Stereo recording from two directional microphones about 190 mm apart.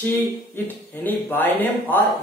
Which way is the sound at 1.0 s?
10° left (ahead or behind).